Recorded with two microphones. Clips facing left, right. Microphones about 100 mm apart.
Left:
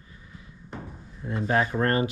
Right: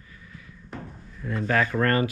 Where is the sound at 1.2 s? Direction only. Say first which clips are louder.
Even; 25° left (ahead or behind).